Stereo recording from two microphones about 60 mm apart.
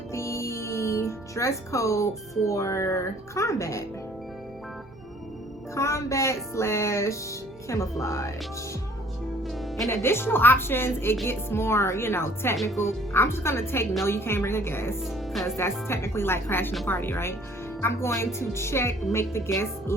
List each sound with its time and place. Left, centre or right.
0.1 s music: left
2.4 s speech: left
5.7 s speech: left
9.9 s a woman's voice: left
15.0 s speech: centre
15.4 s a woman's voice: left